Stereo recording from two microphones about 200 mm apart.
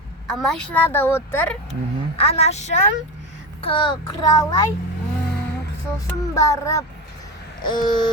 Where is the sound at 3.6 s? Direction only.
25° left (ahead or behind).